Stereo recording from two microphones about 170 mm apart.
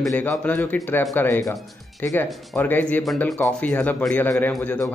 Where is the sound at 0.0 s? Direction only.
10° left (ahead or behind).